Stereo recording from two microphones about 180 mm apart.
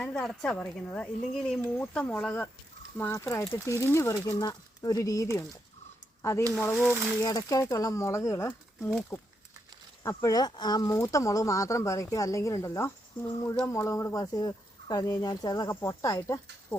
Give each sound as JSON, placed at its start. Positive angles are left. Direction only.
{"t": 0.0, "sound": "speech", "side_deg": 5}
{"t": 6.7, "sound": "speech", "side_deg": -5}
{"t": 7.2, "sound": "speech", "side_deg": 20}